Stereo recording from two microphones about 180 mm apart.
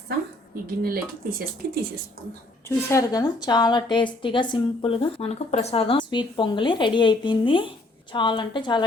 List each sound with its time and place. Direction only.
0.5 s speech: 55° right (ahead or behind)
2.6 s a woman's voice: 20° left (ahead or behind)